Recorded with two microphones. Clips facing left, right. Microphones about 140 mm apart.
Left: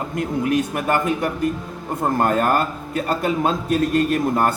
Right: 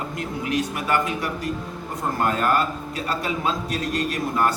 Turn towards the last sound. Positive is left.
turn(degrees=50)  # may be behind; listen again after turning